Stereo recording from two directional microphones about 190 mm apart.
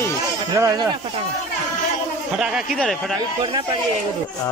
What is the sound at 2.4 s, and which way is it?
Speech, centre (ahead or behind).